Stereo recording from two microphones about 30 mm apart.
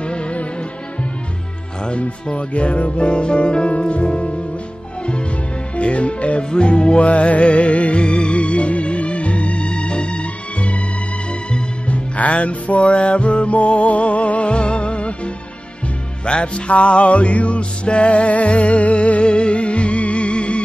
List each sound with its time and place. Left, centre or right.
0.0 s music: left
1.9 s speech: left
5.8 s speech: left
6.5 s music: left
11.9 s music: left
16.3 s speech: left
16.7 s music: left